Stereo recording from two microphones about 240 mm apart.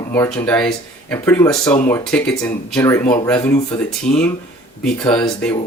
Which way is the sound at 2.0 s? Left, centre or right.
Centre.